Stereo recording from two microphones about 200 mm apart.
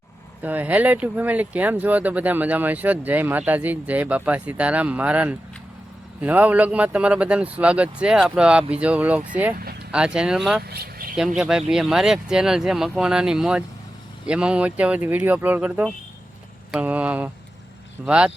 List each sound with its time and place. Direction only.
0.4 s speech: 10° right (ahead or behind)
10.6 s speech: 50° right (ahead or behind)
11.3 s speech: centre (ahead or behind)